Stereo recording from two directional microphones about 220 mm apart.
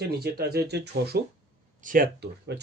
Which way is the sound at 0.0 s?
45° right (ahead or behind).